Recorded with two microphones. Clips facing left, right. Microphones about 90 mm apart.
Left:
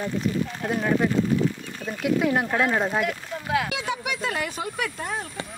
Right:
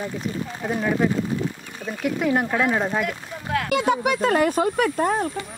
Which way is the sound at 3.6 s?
55° right (ahead or behind).